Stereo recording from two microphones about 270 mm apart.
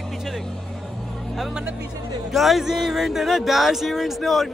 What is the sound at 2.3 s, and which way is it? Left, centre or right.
Speech, centre.